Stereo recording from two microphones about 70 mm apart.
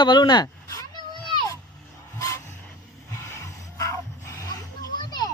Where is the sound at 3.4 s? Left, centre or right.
Left.